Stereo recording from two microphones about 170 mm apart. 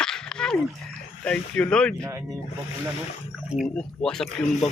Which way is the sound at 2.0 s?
15° right (ahead or behind).